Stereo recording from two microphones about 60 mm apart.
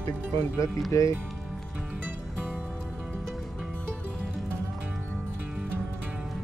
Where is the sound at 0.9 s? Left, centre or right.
Left.